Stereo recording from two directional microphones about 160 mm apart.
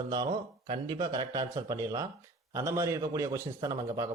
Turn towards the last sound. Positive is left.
turn(degrees=-25)  # may be behind; listen again after turning